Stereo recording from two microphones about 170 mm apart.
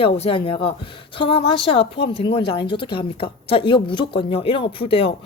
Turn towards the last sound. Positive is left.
turn(degrees=35)  # may be behind; listen again after turning